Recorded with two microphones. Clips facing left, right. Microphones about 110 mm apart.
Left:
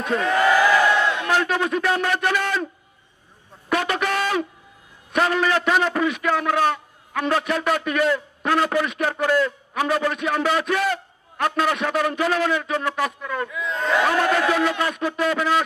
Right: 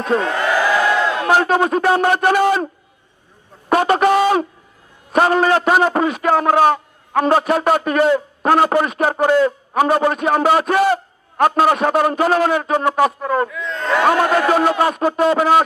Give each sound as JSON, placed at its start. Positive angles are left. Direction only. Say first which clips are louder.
{"t": 0.0, "sound": "crowd", "louder": "right 2 dB", "side_deg": -35}
{"t": 1.1, "sound": "a man's voice", "louder": "right 6 dB", "side_deg": -40}
{"t": 3.6, "sound": "a sound", "louder": "right 9 dB", "side_deg": -40}
{"t": 5.1, "sound": "a man's voice", "louder": "right 6 dB", "side_deg": -40}
{"t": 13.5, "sound": "speech", "louder": "right 2 dB", "side_deg": 5}
{"t": 13.9, "sound": "a man's voice", "louder": "right 5 dB", "side_deg": -45}